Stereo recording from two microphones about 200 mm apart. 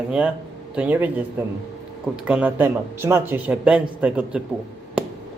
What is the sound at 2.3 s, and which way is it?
A man's voice, 5° right (ahead or behind).